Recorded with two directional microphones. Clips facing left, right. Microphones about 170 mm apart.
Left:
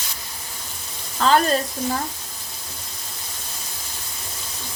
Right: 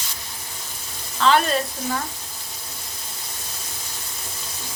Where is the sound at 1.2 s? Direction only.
40° left (ahead or behind).